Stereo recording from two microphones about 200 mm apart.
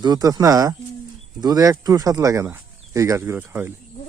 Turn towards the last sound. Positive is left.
turn(degrees=-10)  # may be behind; listen again after turning